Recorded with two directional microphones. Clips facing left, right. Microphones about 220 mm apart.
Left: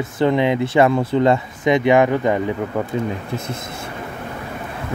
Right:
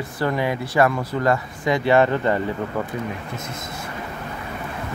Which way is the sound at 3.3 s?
30° left (ahead or behind).